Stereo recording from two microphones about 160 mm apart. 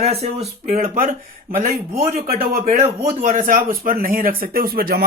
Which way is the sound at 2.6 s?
45° right (ahead or behind).